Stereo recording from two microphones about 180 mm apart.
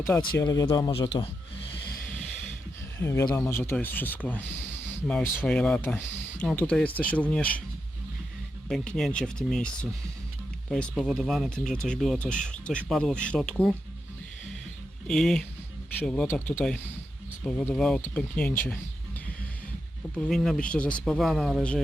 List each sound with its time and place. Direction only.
0.3 s speech: 20° left (ahead or behind)
3.0 s speech: 15° left (ahead or behind)
8.7 s speech: 5° left (ahead or behind)
10.7 s speech: 5° left (ahead or behind)
15.0 s speech: 5° left (ahead or behind)
20.1 s speech: 5° left (ahead or behind)